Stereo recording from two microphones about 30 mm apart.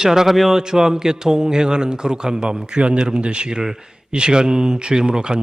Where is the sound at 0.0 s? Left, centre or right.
Centre.